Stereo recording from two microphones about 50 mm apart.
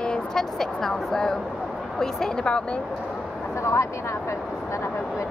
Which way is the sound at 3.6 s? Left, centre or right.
Left.